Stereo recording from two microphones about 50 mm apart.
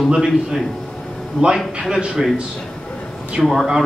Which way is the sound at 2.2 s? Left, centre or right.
Centre.